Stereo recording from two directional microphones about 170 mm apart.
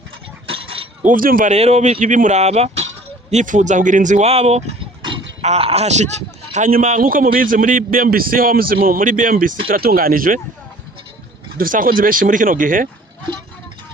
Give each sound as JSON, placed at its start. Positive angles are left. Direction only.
{"t": 0.4, "sound": "chink", "side_deg": -30}
{"t": 1.0, "sound": "speech", "side_deg": -55}
{"t": 1.5, "sound": "speech", "side_deg": -40}
{"t": 6.5, "sound": "a man's voice", "side_deg": -50}
{"t": 11.5, "sound": "speech", "side_deg": -55}